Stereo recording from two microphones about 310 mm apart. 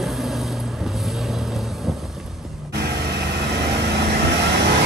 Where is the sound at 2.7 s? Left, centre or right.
Right.